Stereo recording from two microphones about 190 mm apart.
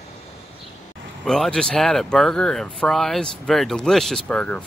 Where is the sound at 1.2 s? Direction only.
Centre (ahead or behind).